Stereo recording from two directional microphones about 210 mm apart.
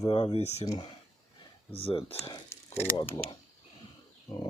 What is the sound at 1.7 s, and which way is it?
Speech, 25° left (ahead or behind).